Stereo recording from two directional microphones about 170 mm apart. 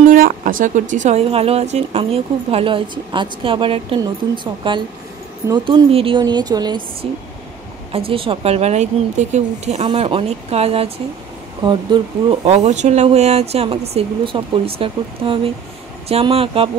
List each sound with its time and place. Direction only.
0.1 s a woman's voice: 55° right (ahead or behind); by 7.1 s 25° right (ahead or behind)
8.1 s a woman's voice: 30° right (ahead or behind)
12.4 s a woman's voice: 40° right (ahead or behind)